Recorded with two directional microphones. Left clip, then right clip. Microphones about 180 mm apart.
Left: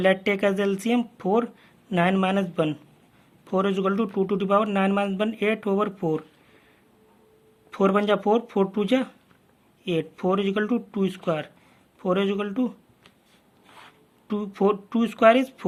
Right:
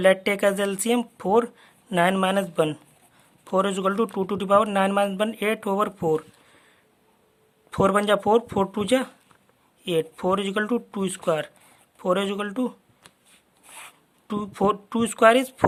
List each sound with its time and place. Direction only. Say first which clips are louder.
0.0 s a man's voice: right 2 dB; 35° right (ahead or behind)
7.7 s a man's voice: right 1 dB; 40° right (ahead or behind)
13.8 s speech: left 1 dB; 40° right (ahead or behind)